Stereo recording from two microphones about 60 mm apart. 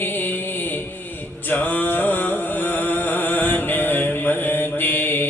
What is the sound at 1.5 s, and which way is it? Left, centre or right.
Music, left.